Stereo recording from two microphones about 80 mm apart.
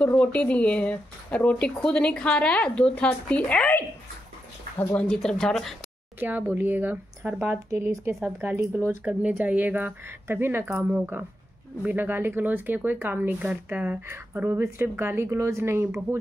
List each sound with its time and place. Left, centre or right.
0.0 s speech: centre
4.9 s speech: centre
6.1 s speech: right
7.7 s a woman's voice: right
14.0 s a woman's voice: right